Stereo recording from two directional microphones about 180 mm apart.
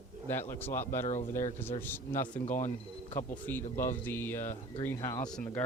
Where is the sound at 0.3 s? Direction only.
10° left (ahead or behind).